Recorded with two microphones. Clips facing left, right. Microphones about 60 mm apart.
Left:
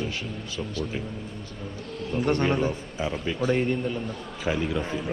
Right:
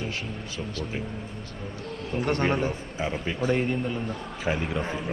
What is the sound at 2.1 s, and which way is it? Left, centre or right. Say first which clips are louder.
A man's voice: left 1 dB; centre.